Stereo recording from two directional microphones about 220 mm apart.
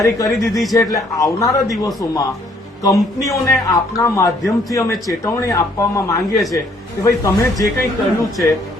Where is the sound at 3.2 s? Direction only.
15° left (ahead or behind).